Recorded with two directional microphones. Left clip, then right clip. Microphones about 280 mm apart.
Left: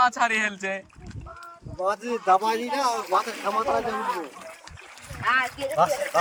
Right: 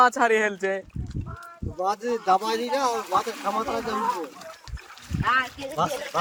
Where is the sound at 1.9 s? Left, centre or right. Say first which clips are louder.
Left 1 dB; right.